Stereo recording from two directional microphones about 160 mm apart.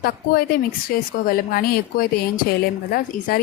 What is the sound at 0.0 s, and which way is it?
A woman's voice, 70° left (ahead or behind).